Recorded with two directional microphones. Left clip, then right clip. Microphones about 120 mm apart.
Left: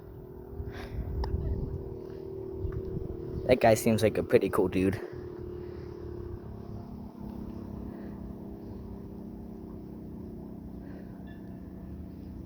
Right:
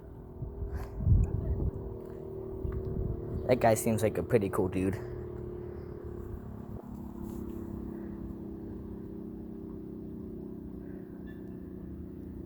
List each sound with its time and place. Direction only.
3.4 s speech: 35° left (ahead or behind); by 4.5 s 50° left (ahead or behind)
4.5 s speech: 90° left